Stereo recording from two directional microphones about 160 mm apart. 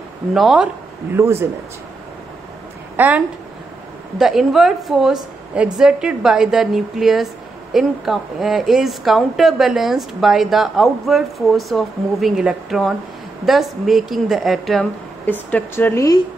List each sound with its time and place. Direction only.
0.3 s a woman's voice: centre (ahead or behind)
1.1 s speech: 15° right (ahead or behind)
3.0 s a woman's voice: 10° right (ahead or behind)
15.5 s speech: 15° left (ahead or behind)